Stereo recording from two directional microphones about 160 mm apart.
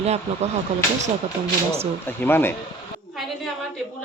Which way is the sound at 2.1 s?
15° left (ahead or behind).